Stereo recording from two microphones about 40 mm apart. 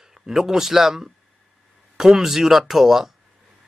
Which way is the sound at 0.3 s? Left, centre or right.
Centre.